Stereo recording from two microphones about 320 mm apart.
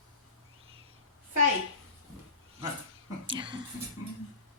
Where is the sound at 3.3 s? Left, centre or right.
Centre.